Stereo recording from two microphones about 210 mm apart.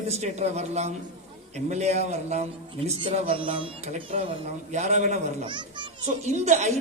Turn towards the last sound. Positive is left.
turn(degrees=-35)  # may be behind; listen again after turning